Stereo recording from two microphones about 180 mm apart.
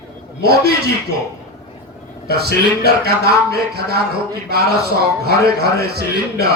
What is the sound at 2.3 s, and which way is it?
A man's voice, 60° right (ahead or behind).